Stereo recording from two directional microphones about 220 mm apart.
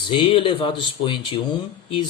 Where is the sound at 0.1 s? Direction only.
25° left (ahead or behind).